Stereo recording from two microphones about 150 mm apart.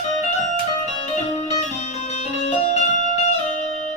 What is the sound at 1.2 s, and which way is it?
Music, 45° left (ahead or behind).